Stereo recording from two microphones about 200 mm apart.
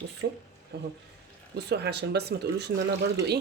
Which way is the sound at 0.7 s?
55° right (ahead or behind).